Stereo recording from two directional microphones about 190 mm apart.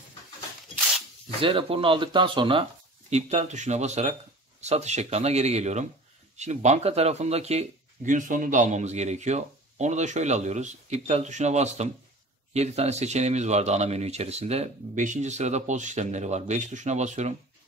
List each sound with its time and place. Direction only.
1.4 s speech: 30° right (ahead or behind)